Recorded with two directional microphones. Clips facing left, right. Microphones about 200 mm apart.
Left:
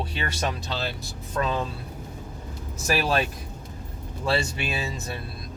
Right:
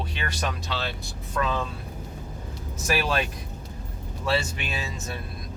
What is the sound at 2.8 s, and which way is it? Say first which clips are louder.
Speech: left 2 dB; 35° left (ahead or behind).